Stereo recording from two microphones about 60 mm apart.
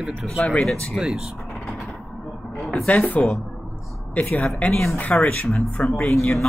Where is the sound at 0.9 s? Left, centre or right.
Centre.